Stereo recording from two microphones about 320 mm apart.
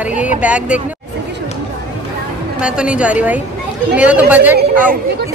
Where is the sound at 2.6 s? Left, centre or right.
Centre.